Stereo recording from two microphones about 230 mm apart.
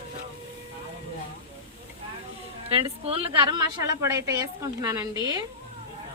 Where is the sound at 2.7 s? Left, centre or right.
Right.